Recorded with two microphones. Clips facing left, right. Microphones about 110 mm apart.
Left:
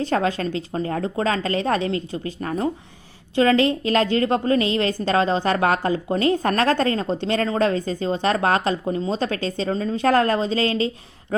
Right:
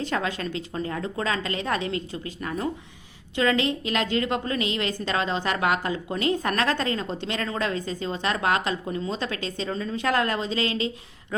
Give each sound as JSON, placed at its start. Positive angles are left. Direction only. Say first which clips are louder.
{"t": 0.0, "sound": "a woman's voice", "louder": "left 6 dB", "side_deg": 35}